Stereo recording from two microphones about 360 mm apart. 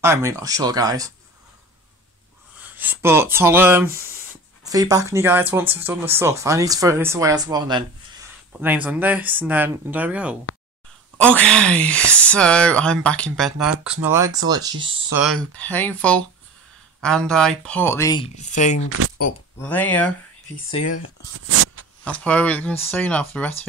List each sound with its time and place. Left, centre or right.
0.0 s speech: centre
2.8 s speech: centre
15.5 s speech: centre
18.9 s speech: right
19.6 s speech: centre
21.5 s a sound: right
22.0 s speech: centre